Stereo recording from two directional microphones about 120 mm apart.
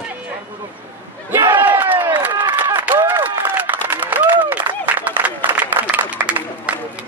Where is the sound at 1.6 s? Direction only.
15° right (ahead or behind).